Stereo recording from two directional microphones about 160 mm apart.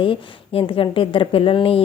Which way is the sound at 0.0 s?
35° left (ahead or behind).